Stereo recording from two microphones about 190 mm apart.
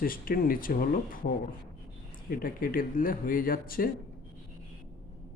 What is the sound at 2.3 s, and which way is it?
Speech, 50° left (ahead or behind).